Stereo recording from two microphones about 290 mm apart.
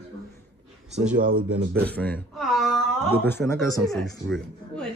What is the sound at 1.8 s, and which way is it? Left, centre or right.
Speech, centre.